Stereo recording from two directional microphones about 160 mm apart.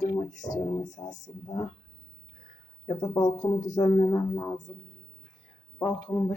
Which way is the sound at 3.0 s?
25° left (ahead or behind).